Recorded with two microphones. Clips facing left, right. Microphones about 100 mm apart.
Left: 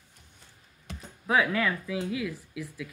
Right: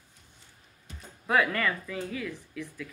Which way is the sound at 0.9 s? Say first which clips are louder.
Left 6 dB; 80° left.